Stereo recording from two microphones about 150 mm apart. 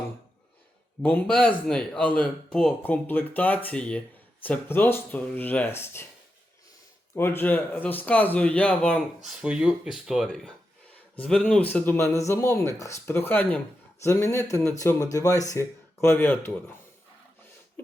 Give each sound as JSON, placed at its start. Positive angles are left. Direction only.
{"t": 1.0, "sound": "a man's voice", "side_deg": 10}
{"t": 7.2, "sound": "a man's voice", "side_deg": 15}